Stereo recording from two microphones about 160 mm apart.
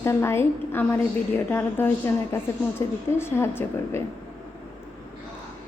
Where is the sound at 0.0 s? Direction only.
15° left (ahead or behind).